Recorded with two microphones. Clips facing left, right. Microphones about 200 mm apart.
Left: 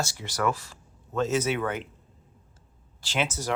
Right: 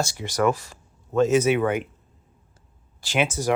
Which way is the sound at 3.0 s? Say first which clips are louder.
Right 5 dB; 10° right (ahead or behind).